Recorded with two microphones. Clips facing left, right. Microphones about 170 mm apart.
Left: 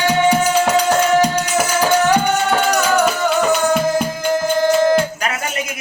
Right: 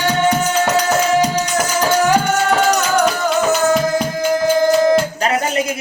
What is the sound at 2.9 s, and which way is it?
Music, 5° left (ahead or behind).